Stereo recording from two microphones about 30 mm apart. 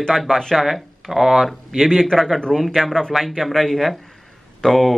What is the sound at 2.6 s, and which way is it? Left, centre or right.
A man's voice, centre.